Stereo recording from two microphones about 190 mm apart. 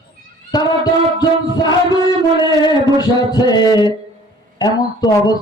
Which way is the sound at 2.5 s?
20° left (ahead or behind).